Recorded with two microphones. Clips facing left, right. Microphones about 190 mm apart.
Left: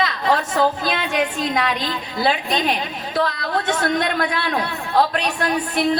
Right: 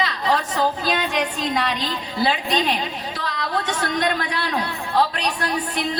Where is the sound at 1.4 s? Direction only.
45° left (ahead or behind).